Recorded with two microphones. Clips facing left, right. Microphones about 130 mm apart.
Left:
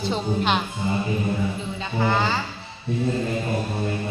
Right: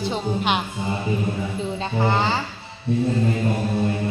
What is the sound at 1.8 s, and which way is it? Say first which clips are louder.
Speech: right 1 dB; 30° right (ahead or behind).